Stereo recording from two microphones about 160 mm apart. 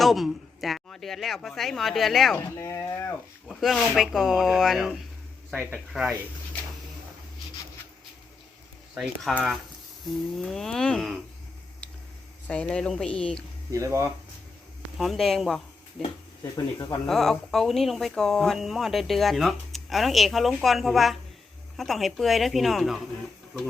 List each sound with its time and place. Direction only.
0.0 s speech: centre (ahead or behind)
2.6 s speech: 20° left (ahead or behind)
3.5 s speech: centre (ahead or behind)
9.3 s speech: centre (ahead or behind)
12.5 s speech: 5° left (ahead or behind)
13.7 s speech: 20° right (ahead or behind)
14.9 s speech: centre (ahead or behind)
16.4 s speech: 20° left (ahead or behind)
17.1 s speech: centre (ahead or behind)